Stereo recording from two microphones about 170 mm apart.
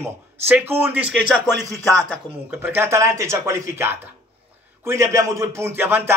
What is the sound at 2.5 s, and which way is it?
A man's voice, 15° right (ahead or behind).